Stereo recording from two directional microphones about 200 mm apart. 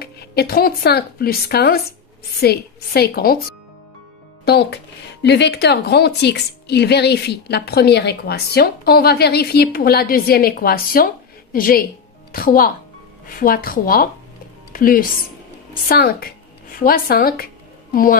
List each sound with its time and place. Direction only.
0.0 s a woman's voice: 50° left (ahead or behind)
4.5 s a woman's voice: 55° left (ahead or behind)